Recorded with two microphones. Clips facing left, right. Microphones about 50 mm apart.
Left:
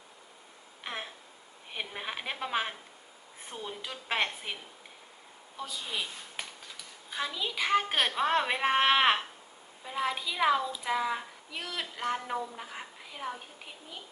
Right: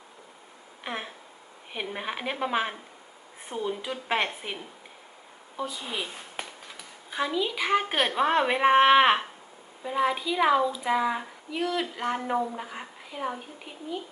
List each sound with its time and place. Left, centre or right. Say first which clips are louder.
0.9 s a woman's voice: right 4 dB; centre
5.5 s a woman's voice: right 4 dB; centre
7.1 s a woman's voice: right 6 dB; centre